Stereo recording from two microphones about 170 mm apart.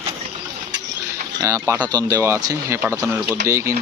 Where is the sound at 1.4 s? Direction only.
20° right (ahead or behind).